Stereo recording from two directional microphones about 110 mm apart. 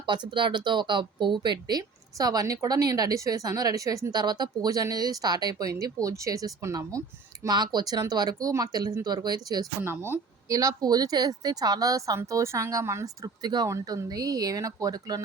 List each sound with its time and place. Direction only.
0.0 s speech: 45° right (ahead or behind); by 7.0 s 30° right (ahead or behind)
7.4 s speech: 40° right (ahead or behind)
9.8 s speech: 20° right (ahead or behind)